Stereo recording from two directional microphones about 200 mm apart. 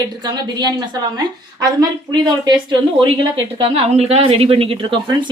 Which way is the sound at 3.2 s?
30° right (ahead or behind).